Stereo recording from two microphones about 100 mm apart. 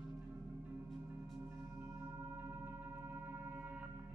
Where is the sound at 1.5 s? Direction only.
25° right (ahead or behind).